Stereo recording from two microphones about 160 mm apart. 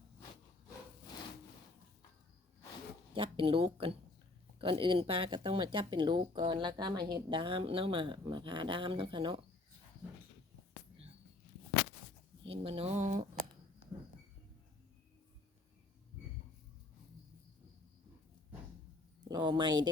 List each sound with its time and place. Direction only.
3.2 s speech: 35° right (ahead or behind)
12.5 s speech: 35° right (ahead or behind)
19.3 s speech: 25° right (ahead or behind)